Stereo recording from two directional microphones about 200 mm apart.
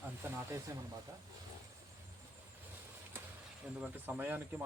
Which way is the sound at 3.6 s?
10° right (ahead or behind).